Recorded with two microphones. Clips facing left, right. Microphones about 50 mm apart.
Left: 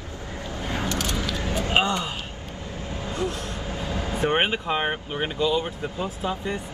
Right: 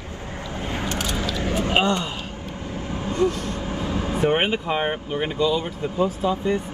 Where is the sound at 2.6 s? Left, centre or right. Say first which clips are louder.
Right 4 dB; right.